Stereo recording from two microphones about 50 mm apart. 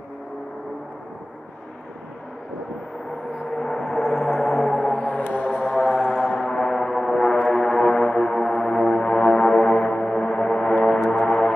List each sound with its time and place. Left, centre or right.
3.3 s gong: centre
4.3 s gong: centre
5.0 s music: left
5.9 s music: centre